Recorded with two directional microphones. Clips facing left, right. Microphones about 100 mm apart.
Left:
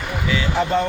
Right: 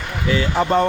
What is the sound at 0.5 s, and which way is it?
Speech, 50° right (ahead or behind).